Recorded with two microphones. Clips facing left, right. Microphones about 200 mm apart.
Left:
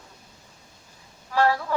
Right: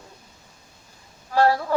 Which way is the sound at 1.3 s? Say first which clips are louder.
Right 3 dB; 35° right (ahead or behind).